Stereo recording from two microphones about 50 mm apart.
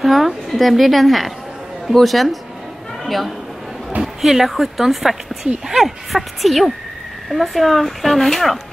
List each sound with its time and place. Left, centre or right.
0.0 s a woman's voice: centre